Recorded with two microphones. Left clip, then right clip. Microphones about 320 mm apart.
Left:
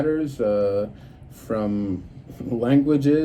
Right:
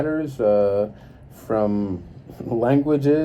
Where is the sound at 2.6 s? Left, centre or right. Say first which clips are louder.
Right 1 dB; centre.